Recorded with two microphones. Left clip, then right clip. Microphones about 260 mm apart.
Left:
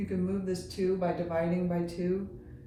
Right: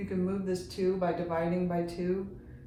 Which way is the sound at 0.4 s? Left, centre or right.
Centre.